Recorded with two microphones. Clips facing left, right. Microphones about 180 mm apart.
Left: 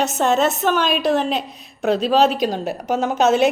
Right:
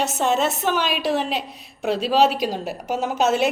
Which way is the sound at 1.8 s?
45° left (ahead or behind).